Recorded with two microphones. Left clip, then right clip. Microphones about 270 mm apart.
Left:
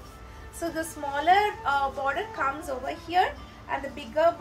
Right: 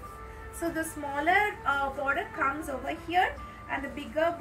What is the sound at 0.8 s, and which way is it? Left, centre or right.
A woman's voice, left.